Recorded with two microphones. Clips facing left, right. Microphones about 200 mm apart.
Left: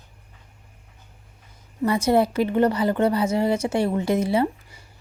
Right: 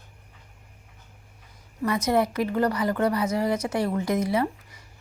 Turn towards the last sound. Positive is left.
turn(degrees=30)  # may be behind; listen again after turning